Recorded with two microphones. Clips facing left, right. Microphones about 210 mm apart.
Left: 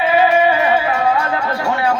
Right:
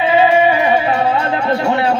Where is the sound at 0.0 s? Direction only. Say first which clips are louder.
Right 2 dB; 20° right (ahead or behind).